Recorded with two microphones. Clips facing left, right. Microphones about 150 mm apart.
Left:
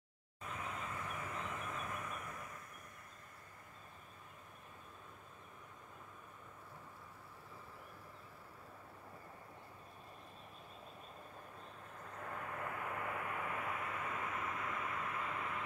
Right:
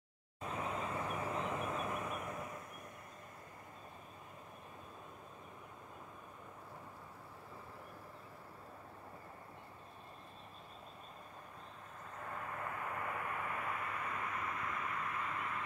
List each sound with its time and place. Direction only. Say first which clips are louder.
0.4 s vehicle: right 5 dB; 35° right (ahead or behind)
12.6 s vehicle: right 1 dB; 40° right (ahead or behind)
13.7 s vehicle: even; 20° left (ahead or behind)